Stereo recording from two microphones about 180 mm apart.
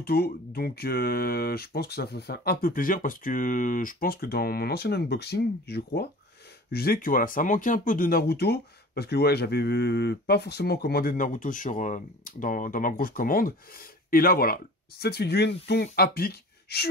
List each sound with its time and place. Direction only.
0.0 s speech: 60° left (ahead or behind)